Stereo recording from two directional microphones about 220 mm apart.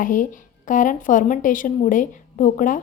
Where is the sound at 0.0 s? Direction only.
35° left (ahead or behind).